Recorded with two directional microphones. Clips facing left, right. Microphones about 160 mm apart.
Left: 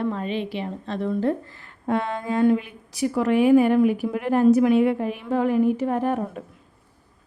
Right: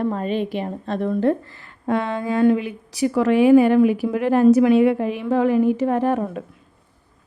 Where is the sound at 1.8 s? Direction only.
90° right.